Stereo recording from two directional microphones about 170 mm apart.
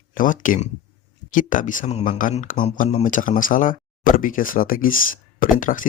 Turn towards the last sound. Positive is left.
turn(degrees=50)  # may be behind; listen again after turning